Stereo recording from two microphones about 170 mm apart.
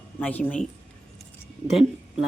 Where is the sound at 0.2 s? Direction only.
10° left (ahead or behind).